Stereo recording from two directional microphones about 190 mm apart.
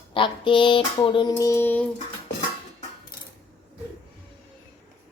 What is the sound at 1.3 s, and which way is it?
Mantra, 15° left (ahead or behind).